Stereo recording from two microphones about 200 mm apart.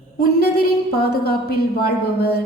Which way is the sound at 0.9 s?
50° left (ahead or behind).